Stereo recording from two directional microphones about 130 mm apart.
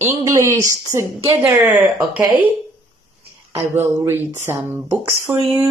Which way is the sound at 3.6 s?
20° right (ahead or behind).